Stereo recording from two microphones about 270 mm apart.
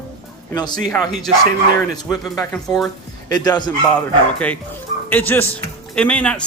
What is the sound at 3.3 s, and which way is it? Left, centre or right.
Speech, centre.